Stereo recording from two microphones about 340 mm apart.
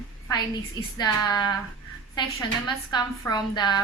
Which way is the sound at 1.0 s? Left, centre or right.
Centre.